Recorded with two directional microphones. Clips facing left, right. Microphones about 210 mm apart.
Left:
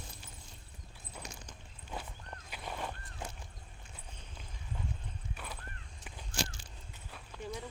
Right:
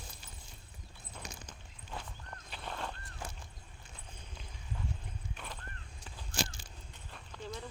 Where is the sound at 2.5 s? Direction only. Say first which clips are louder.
Left 1 dB; 10° left (ahead or behind).